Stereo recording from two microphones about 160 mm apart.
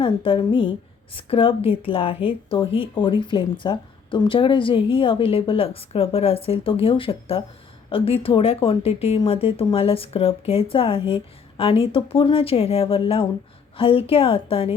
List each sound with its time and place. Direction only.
0.0 s speech: 35° left (ahead or behind)